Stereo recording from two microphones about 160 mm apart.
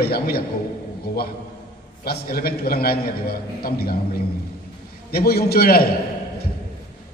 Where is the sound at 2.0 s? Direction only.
75° left (ahead or behind).